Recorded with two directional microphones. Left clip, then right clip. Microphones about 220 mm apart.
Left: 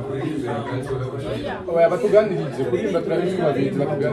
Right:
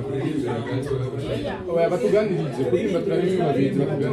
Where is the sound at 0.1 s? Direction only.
Centre (ahead or behind).